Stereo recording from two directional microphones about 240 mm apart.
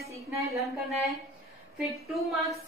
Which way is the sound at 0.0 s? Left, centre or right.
Centre.